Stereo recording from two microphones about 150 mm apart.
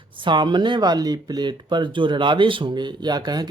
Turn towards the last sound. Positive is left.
turn(degrees=-25)  # may be behind; listen again after turning